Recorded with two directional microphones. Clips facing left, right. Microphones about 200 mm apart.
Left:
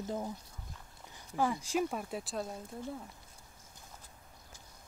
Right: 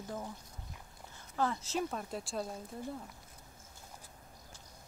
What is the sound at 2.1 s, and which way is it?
Speech, centre (ahead or behind).